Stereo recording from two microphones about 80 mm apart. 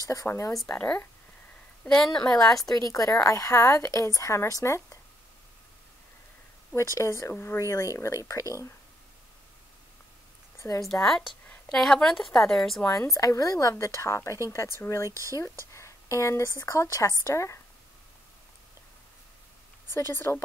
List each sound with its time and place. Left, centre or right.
0.0 s speech: left
0.7 s a woman's voice: centre
2.0 s a woman's voice: centre
2.7 s a woman's voice: left
7.0 s speech: left
10.6 s a woman's voice: left
10.9 s a woman's voice: centre
12.8 s a woman's voice: left
15.0 s speech: right
15.7 s a sound: left
16.5 s speech: left
19.9 s speech: left